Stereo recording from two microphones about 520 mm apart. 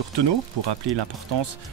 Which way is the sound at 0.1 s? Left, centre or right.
Right.